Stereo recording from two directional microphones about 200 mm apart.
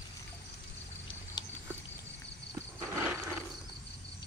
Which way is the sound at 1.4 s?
20° left (ahead or behind).